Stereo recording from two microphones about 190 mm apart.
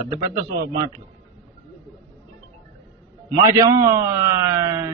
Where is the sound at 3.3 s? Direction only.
15° right (ahead or behind).